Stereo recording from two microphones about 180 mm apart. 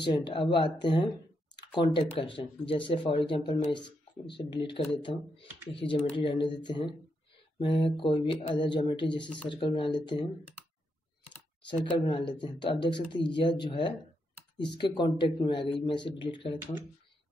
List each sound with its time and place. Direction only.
0.0 s speech: 25° left (ahead or behind)
12.0 s speech: 25° left (ahead or behind)